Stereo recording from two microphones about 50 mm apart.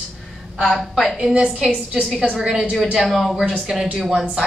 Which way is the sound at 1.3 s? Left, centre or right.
Centre.